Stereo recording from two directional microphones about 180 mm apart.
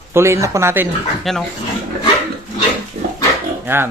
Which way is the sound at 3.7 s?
10° right (ahead or behind).